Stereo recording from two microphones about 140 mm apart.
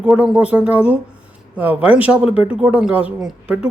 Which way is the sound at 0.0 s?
5° right (ahead or behind).